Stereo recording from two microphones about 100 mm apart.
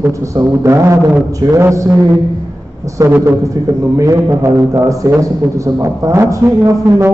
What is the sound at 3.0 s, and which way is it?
Speech, 20° right (ahead or behind).